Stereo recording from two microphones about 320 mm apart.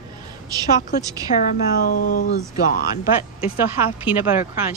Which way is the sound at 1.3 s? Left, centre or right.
Left.